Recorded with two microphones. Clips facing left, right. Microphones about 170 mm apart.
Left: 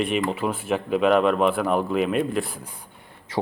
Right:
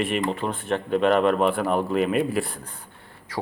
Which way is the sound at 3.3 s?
25° left (ahead or behind).